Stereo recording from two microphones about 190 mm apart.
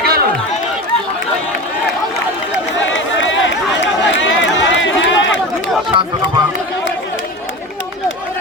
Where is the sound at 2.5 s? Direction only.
75° left (ahead or behind).